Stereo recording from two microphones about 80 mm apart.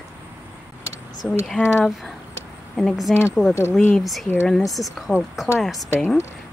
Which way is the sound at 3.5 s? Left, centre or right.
Left.